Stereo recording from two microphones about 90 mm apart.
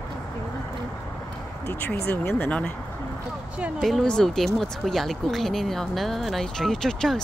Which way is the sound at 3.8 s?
5° left (ahead or behind).